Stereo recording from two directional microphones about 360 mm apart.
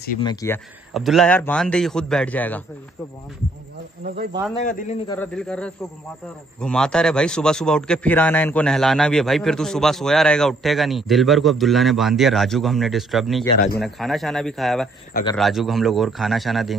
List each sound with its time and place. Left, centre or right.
0.2 s speech: centre
0.9 s a man's voice: centre
4.0 s speech: right
4.6 s a man's voice: centre
5.1 s a man's voice: centre
13.6 s a man's voice: left
13.8 s a man's voice: centre